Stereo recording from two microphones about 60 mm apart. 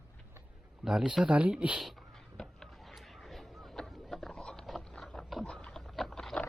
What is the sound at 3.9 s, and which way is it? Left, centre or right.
Boat, centre.